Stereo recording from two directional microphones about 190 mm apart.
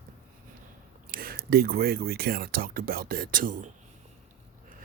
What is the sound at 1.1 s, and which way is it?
Speech, 50° right (ahead or behind).